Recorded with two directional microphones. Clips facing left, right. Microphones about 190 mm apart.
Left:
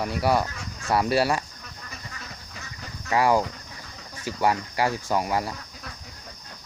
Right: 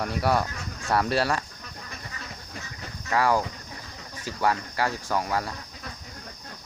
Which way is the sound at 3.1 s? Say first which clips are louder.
Left 2 dB; 15° left (ahead or behind).